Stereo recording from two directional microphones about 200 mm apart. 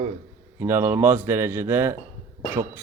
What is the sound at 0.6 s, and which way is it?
Speech, 15° right (ahead or behind).